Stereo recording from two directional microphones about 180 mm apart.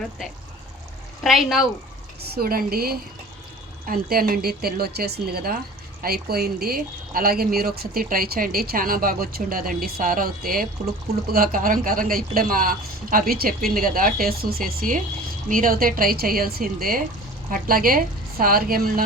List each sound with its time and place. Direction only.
1.2 s speech: centre (ahead or behind)
2.2 s speech: 60° right (ahead or behind)